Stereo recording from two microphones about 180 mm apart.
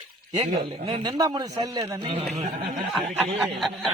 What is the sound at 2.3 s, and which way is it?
Speech, 35° right (ahead or behind).